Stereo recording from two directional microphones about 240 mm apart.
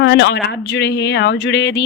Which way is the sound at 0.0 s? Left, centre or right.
Left.